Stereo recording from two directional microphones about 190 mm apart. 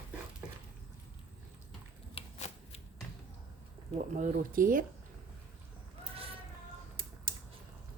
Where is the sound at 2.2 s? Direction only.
35° left (ahead or behind).